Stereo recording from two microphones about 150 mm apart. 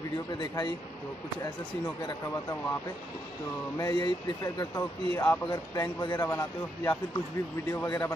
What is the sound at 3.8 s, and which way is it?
Speech, 30° left (ahead or behind).